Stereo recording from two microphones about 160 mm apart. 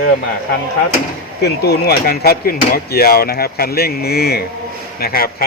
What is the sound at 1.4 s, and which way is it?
A man's voice, 85° left.